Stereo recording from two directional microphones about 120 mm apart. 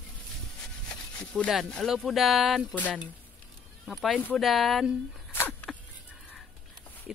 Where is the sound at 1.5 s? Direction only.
5° left (ahead or behind).